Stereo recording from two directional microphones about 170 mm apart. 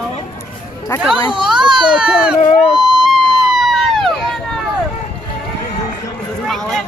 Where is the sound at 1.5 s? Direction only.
30° right (ahead or behind).